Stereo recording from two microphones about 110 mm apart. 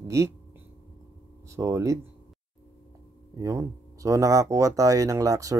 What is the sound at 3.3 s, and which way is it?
Speech, 30° right (ahead or behind).